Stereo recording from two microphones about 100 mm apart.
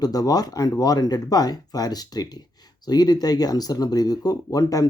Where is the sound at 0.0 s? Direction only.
40° left (ahead or behind).